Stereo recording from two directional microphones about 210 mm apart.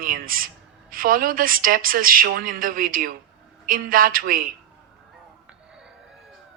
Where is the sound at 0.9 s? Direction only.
40° right (ahead or behind).